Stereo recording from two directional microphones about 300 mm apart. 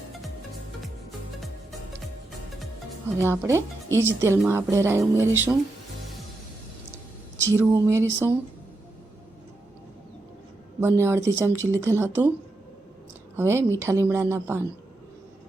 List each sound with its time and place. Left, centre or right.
3.2 s speech: centre
7.3 s speech: centre
10.8 s speech: centre
13.3 s speech: centre